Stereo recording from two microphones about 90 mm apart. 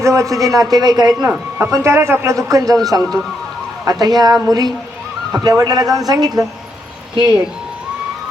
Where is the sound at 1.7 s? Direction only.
30° right (ahead or behind); by 6.4 s 45° right (ahead or behind).